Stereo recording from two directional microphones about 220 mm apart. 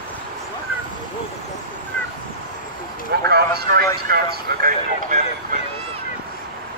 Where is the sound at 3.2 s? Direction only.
45° right (ahead or behind).